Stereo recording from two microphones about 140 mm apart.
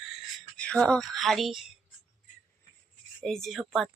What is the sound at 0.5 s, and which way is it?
Speech, 10° left (ahead or behind).